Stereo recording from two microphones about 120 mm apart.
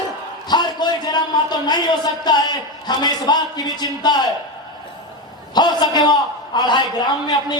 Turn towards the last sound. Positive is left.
turn(degrees=35)  # may be behind; listen again after turning